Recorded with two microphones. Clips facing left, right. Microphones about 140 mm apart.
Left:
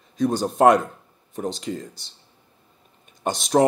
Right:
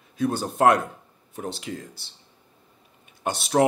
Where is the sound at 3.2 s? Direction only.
5° right (ahead or behind).